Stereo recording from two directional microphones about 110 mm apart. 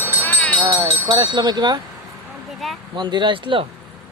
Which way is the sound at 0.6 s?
30° right (ahead or behind).